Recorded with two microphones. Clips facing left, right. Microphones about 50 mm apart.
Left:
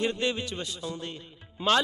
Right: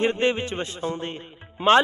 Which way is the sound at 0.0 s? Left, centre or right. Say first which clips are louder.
Right 6 dB; right.